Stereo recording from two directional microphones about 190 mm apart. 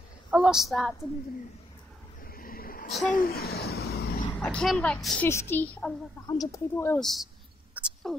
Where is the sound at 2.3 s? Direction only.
50° left (ahead or behind).